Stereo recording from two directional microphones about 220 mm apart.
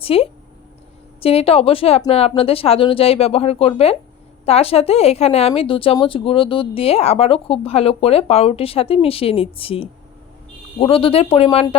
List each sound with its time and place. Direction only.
0.0 s a woman's voice: 25° left (ahead or behind)